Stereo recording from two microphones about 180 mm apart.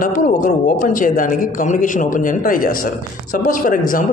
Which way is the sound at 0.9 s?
50° left (ahead or behind).